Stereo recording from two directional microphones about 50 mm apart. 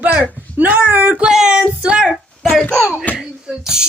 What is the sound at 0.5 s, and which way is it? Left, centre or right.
Speech, right.